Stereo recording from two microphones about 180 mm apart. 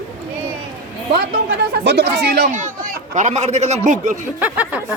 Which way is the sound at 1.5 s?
70° right (ahead or behind).